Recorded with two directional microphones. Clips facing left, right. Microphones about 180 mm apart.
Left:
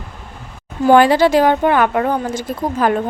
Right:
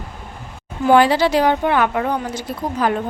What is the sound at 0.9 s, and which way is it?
Speech, 50° left (ahead or behind).